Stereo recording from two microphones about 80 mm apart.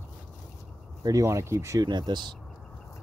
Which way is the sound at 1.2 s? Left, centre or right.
Right.